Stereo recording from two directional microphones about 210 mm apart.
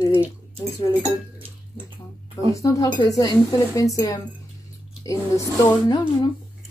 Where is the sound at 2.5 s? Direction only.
15° left (ahead or behind).